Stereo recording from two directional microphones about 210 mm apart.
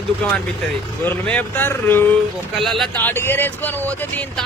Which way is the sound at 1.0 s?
10° left (ahead or behind).